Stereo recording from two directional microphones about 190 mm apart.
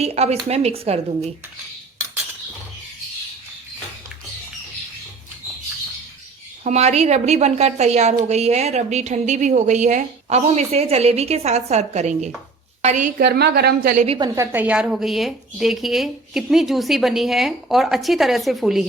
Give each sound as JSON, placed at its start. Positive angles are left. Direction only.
{"t": 0.0, "sound": "a woman's voice", "side_deg": -35}
{"t": 6.7, "sound": "a woman's voice", "side_deg": -35}
{"t": 13.1, "sound": "a woman's voice", "side_deg": -55}
{"t": 13.9, "sound": "a woman's voice", "side_deg": -40}
{"t": 14.2, "sound": "a woman's voice", "side_deg": -15}